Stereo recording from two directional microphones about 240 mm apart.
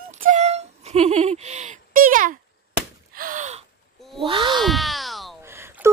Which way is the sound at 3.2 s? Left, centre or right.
Right.